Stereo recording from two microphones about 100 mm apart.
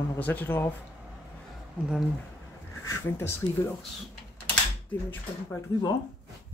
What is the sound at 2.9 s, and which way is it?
Speech, 25° left (ahead or behind).